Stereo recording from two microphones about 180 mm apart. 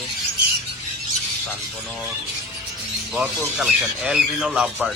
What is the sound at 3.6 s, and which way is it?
Speech, 5° right (ahead or behind).